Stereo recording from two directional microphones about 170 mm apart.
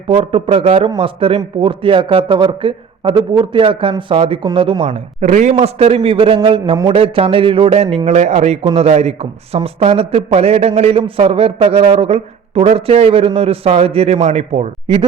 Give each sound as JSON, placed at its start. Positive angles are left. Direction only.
{"t": 0.1, "sound": "a man's voice", "side_deg": -35}